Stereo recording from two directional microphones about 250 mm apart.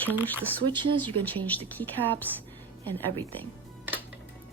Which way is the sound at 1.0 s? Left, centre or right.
Centre.